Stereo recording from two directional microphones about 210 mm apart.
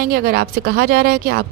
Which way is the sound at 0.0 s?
45° right (ahead or behind).